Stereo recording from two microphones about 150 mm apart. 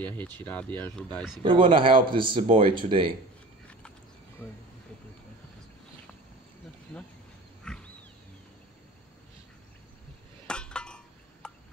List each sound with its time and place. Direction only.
0.0 s speech: 10° left (ahead or behind)
1.4 s speech: 35° right (ahead or behind)
7.6 s wild animals: 5° left (ahead or behind)
10.4 s chink: 5° left (ahead or behind)
11.4 s fowl: 5° left (ahead or behind)